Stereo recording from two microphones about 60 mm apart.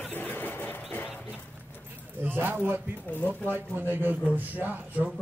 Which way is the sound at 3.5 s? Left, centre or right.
Right.